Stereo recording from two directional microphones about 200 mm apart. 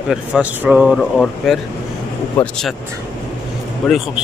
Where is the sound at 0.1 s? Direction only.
5° right (ahead or behind).